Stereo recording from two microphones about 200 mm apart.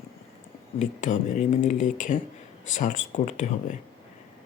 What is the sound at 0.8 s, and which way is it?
Speech, 35° left (ahead or behind).